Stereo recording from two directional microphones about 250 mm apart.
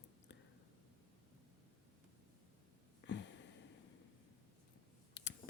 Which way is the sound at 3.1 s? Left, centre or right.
Left.